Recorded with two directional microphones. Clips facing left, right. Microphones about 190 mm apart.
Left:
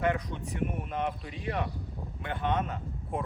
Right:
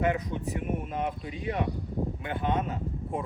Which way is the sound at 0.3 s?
15° right (ahead or behind).